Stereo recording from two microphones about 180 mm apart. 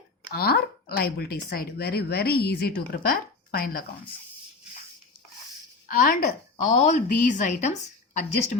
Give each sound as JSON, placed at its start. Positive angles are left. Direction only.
{"t": 0.3, "sound": "speech", "side_deg": 60}
{"t": 5.9, "sound": "a woman's voice", "side_deg": 50}